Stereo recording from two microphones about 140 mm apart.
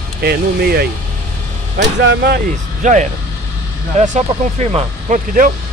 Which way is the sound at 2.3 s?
65° right (ahead or behind).